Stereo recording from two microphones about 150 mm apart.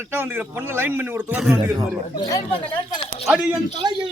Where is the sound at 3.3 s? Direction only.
10° right (ahead or behind).